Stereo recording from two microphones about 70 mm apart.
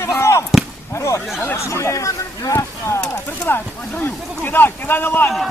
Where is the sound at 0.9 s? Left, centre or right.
Left.